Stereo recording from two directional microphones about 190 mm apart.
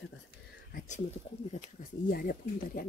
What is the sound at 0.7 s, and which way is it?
Speech, 40° left (ahead or behind).